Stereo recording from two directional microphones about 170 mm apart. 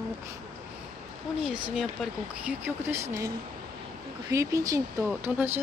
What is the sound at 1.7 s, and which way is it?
Speech, 5° right (ahead or behind).